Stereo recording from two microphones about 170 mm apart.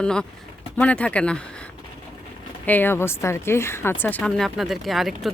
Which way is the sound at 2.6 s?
10° left (ahead or behind).